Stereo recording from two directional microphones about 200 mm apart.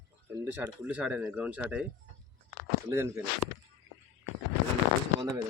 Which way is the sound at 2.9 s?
15° right (ahead or behind).